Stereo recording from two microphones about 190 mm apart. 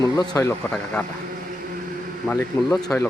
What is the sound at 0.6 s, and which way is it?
Speech, 5° left (ahead or behind).